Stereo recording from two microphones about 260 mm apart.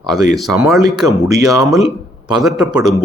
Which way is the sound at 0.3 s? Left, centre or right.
Centre.